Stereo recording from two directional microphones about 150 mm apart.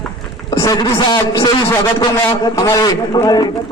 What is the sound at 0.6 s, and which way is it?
A man's voice, 25° left (ahead or behind).